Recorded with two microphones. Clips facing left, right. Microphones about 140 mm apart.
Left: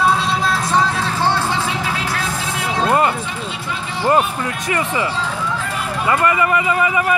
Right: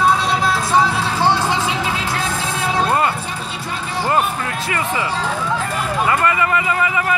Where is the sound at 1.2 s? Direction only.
15° right (ahead or behind).